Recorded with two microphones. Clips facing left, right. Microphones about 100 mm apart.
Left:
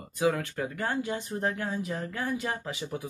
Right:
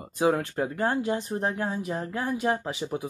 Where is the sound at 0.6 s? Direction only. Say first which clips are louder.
Right 5 dB; 40° right (ahead or behind).